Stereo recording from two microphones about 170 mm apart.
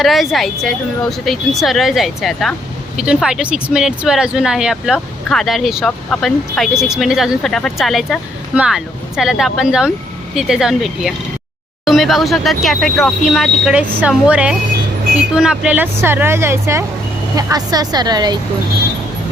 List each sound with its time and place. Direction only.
0.0 s speech: centre (ahead or behind); by 18.3 s 25° right (ahead or behind)